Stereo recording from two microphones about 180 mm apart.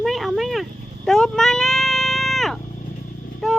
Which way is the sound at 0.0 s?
Centre (ahead or behind).